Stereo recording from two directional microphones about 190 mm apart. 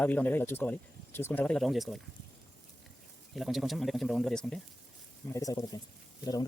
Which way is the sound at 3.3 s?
Centre (ahead or behind).